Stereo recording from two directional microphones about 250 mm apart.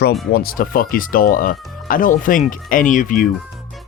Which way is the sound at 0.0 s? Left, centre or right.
Left.